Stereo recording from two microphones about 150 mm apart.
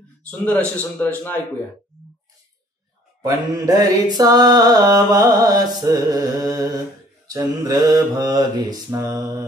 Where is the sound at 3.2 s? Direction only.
25° right (ahead or behind).